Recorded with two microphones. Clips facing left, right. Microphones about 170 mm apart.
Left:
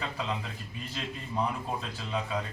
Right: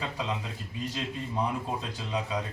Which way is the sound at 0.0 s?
15° right (ahead or behind).